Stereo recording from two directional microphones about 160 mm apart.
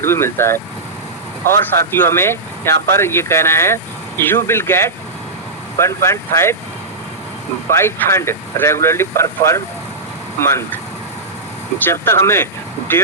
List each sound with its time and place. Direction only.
0.0 s speech: 15° left (ahead or behind)
7.7 s speech: 15° left (ahead or behind)
11.9 s speech: 15° left (ahead or behind)